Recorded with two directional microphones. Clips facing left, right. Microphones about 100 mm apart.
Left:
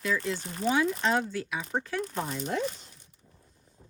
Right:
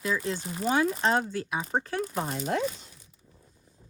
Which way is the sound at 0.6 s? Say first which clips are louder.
Right 1 dB; 40° right (ahead or behind).